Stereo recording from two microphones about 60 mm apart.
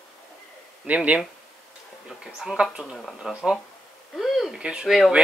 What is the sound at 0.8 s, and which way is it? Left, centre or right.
Speech, right.